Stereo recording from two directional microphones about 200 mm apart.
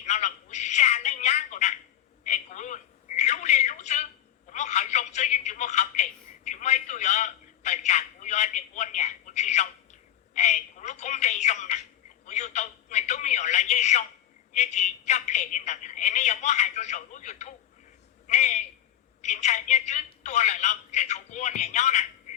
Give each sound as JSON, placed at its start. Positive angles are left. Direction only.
{"t": 0.0, "sound": "speech", "side_deg": 35}
{"t": 2.2, "sound": "telephone", "side_deg": 35}
{"t": 10.3, "sound": "speech", "side_deg": 35}